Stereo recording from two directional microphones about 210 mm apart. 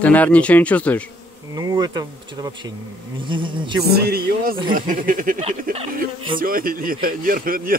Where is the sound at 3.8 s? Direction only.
50° right (ahead or behind).